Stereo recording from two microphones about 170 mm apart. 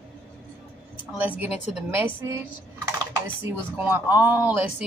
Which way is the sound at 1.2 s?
10° right (ahead or behind).